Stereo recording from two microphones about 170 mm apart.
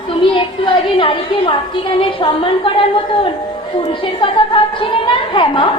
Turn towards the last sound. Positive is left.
turn(degrees=30)  # may be behind; listen again after turning